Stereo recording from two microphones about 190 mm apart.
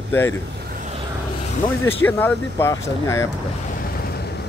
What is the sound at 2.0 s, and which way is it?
Speech, 10° left (ahead or behind).